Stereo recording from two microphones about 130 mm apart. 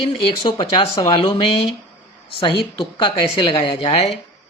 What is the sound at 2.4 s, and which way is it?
A woman's voice, 40° left (ahead or behind).